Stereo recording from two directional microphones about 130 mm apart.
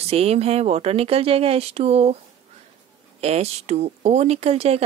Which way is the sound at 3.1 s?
55° right (ahead or behind).